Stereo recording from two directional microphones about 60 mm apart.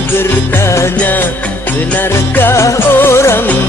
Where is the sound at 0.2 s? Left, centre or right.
Left.